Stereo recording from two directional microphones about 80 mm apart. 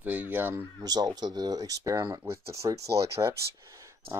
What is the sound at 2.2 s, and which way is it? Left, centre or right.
Speech, right.